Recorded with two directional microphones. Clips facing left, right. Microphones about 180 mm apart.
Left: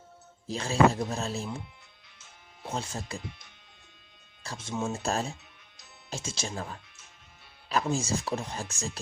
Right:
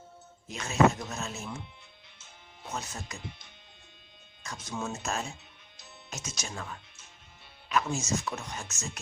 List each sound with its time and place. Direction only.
0.4 s speech: 30° left (ahead or behind)
2.6 s speech: 30° left (ahead or behind)
4.4 s speech: 25° left (ahead or behind)